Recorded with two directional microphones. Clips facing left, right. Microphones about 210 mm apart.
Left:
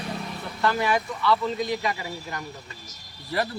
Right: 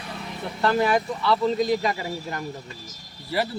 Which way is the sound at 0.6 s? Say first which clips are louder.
Right 3 dB; 30° right (ahead or behind).